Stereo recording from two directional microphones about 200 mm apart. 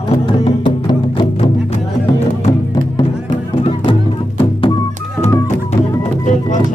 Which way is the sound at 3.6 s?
25° left (ahead or behind).